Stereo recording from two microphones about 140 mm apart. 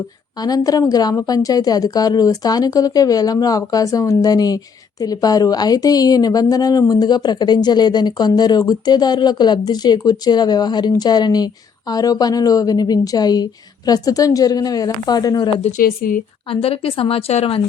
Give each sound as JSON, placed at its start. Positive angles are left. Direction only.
{"t": 0.4, "sound": "a woman's voice", "side_deg": 25}
{"t": 15.8, "sound": "a woman's voice", "side_deg": 90}
{"t": 16.5, "sound": "a woman's voice", "side_deg": 40}